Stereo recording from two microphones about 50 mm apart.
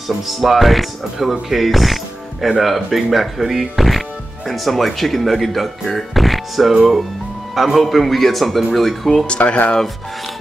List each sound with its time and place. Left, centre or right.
0.3 s speech: centre
9.4 s speech: left